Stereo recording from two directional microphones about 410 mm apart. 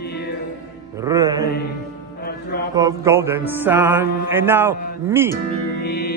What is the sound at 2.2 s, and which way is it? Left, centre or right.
Music, left.